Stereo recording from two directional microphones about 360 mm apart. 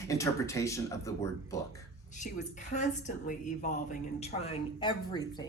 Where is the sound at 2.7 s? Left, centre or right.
Centre.